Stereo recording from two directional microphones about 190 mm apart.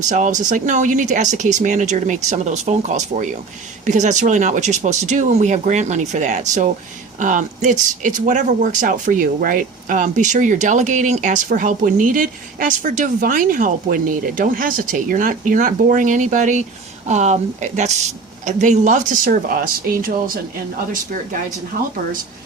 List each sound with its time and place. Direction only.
0.0 s speech: 40° right (ahead or behind)